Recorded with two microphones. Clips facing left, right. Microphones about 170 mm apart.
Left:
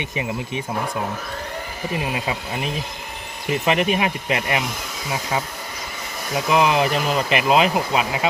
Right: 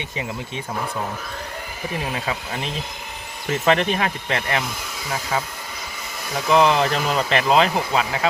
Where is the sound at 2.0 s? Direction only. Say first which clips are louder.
Left 1 dB; 10° left (ahead or behind).